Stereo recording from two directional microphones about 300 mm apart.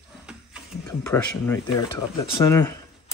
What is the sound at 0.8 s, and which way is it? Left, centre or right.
Speech, centre.